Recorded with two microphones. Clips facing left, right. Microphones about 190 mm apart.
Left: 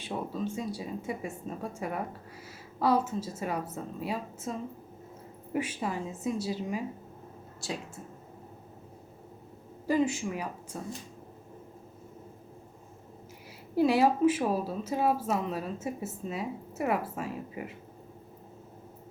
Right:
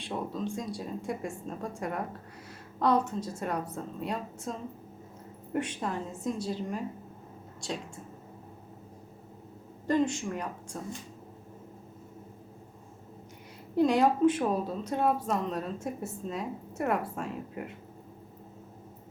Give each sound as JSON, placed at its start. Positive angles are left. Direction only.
{"t": 0.0, "sound": "speech", "side_deg": 5}
{"t": 5.5, "sound": "speech", "side_deg": 5}
{"t": 9.8, "sound": "speech", "side_deg": 5}
{"t": 13.7, "sound": "speech", "side_deg": 5}